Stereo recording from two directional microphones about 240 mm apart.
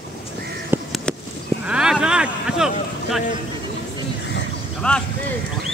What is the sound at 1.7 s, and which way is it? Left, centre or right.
Vehicle, centre.